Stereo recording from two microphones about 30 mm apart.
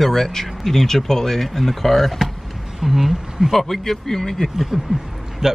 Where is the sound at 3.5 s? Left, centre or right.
Centre.